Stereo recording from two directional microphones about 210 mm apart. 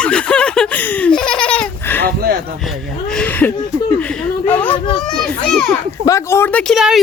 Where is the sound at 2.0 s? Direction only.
45° right (ahead or behind).